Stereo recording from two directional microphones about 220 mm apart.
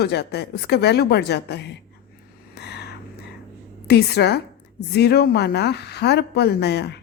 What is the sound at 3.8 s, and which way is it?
A woman's voice, 50° left (ahead or behind).